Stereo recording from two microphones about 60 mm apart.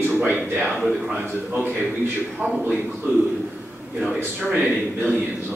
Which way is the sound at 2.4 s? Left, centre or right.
Right.